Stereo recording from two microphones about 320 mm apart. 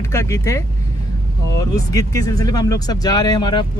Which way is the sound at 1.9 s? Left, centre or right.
Centre.